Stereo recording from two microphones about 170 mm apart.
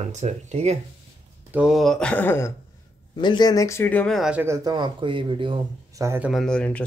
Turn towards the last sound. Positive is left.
turn(degrees=5)  # may be behind; listen again after turning